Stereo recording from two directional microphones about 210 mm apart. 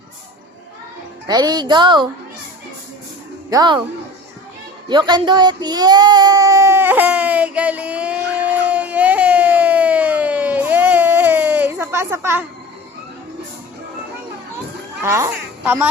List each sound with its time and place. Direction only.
1.3 s a woman's voice: 20° right (ahead or behind)
3.5 s a woman's voice: 20° right (ahead or behind)
4.9 s child singing: 20° right (ahead or behind)
15.0 s a woman's voice: 15° right (ahead or behind)